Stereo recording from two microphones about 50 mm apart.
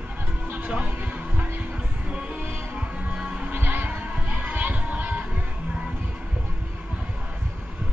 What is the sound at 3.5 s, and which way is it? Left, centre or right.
Music, right.